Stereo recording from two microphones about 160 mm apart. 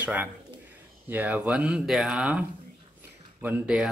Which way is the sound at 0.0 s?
10° right (ahead or behind).